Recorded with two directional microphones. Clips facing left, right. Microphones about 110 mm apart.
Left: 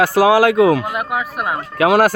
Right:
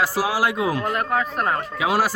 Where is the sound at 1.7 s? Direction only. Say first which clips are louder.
Left 11 dB; 70° left (ahead or behind).